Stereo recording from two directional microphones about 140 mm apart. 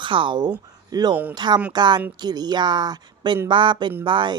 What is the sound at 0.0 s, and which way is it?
A woman's voice, 35° right (ahead or behind).